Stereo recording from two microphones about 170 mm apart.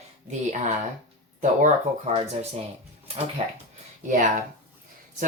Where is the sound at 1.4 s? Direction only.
45° right (ahead or behind).